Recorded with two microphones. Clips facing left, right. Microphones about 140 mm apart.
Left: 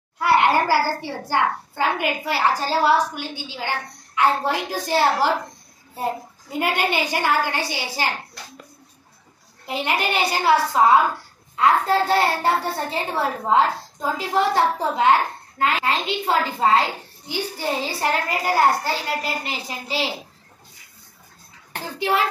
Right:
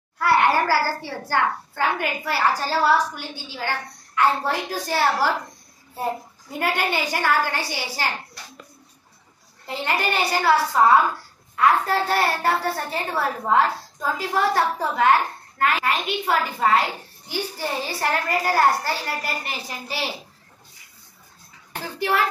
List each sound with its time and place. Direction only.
0.2 s a child's voice: 20° left (ahead or behind)
9.7 s a child's voice: 15° left (ahead or behind)
21.9 s a child's voice: 20° left (ahead or behind)